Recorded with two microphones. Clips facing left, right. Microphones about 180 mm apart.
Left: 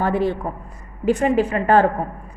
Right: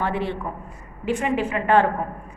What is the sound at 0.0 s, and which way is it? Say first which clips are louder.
A woman's voice: left 5 dB; 40° left (ahead or behind).